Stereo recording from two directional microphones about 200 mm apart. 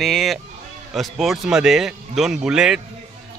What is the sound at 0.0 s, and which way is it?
A man's voice, centre (ahead or behind).